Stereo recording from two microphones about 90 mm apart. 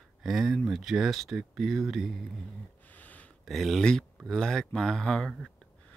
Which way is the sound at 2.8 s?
20° left (ahead or behind).